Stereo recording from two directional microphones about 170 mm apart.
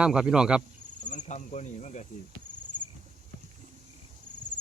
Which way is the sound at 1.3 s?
45° left (ahead or behind).